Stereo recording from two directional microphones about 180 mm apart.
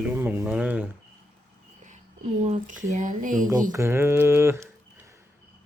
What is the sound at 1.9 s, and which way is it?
Speech, 40° right (ahead or behind).